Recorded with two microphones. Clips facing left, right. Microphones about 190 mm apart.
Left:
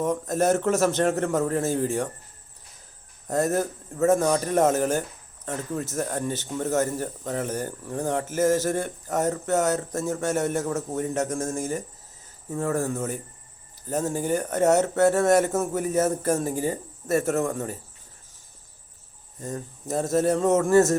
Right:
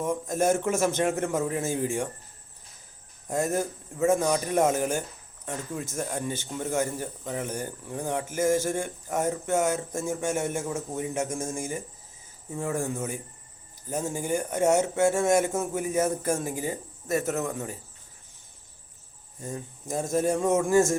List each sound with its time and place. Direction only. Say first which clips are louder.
0.1 s speech: even; 15° right (ahead or behind)
3.2 s speech: left 3 dB; 15° right (ahead or behind)
11.3 s speech: left 4 dB; centre (ahead or behind)
11.5 s speech: left 4 dB; 15° right (ahead or behind)
16.2 s speech: left 4 dB; 40° left (ahead or behind)
19.5 s speech: left 3 dB; 15° right (ahead or behind)